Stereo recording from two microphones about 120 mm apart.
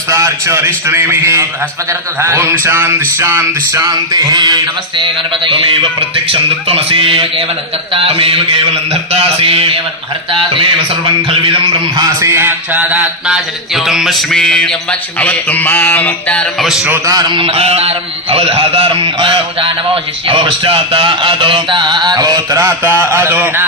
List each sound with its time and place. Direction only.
0.1 s a man's voice: 25° right (ahead or behind)
3.8 s mantra: 30° right (ahead or behind)
5.5 s a man's voice: 45° right (ahead or behind)
8.9 s a sound: 55° right (ahead or behind)
12.2 s a sound: 20° right (ahead or behind)
12.8 s music: 10° right (ahead or behind); by 16.6 s 10° left (ahead or behind)
16.6 s a man's voice: 5° right (ahead or behind)
16.9 s speech: 30° right (ahead or behind)
17.3 s a man's voice: 50° right (ahead or behind)
20.2 s mantra: 45° right (ahead or behind); by 23.6 s 15° right (ahead or behind)